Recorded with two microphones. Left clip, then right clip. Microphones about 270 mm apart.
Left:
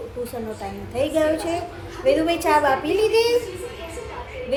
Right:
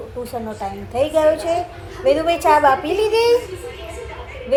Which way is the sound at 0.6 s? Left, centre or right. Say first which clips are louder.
Right 5 dB; centre.